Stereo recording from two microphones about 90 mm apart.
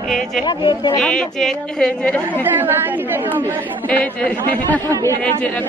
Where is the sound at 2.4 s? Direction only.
20° right (ahead or behind).